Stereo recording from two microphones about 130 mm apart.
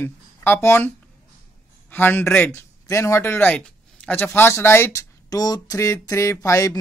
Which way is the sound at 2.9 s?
20° left (ahead or behind).